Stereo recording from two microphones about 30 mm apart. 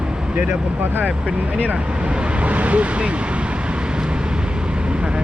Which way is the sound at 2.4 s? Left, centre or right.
Right.